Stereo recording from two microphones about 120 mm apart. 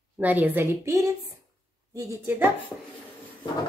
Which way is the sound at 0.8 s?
25° right (ahead or behind).